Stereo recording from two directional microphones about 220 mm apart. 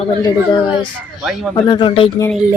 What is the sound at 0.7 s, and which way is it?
Speech, 5° right (ahead or behind).